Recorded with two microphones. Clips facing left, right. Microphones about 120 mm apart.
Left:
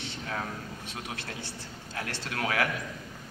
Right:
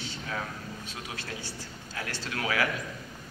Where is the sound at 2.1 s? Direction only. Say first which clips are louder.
Even; 50° left (ahead or behind).